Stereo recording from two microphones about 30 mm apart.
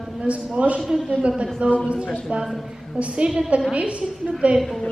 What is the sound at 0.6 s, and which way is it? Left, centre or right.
Speech, right.